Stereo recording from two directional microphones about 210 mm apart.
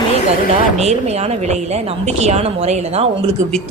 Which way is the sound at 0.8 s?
30° right (ahead or behind).